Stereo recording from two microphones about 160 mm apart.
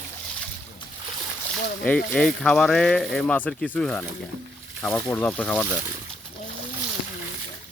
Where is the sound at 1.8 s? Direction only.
5° left (ahead or behind).